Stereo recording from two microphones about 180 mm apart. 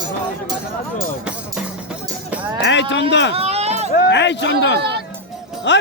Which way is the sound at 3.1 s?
80° left.